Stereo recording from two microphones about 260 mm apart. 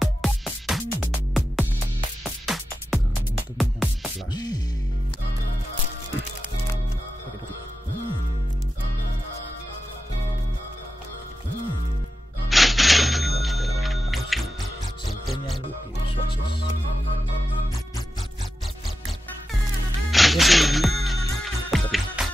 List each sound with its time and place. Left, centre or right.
0.0 s music: centre
4.3 s music: centre
12.4 s telephone bell ringing: centre
15.0 s music: centre
20.1 s music: centre